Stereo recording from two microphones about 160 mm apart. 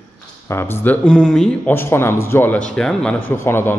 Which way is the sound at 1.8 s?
15° left (ahead or behind).